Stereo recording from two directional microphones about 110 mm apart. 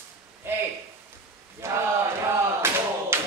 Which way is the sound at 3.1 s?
25° right (ahead or behind).